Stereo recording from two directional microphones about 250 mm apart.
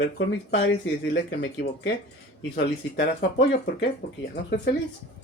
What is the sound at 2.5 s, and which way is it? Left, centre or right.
Speech, left.